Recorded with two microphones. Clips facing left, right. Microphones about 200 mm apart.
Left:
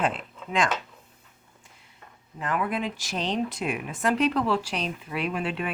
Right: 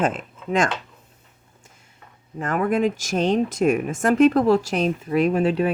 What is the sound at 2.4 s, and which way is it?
Speech, 45° right (ahead or behind).